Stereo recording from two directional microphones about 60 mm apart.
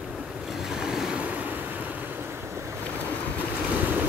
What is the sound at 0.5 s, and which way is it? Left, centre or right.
Waves, centre.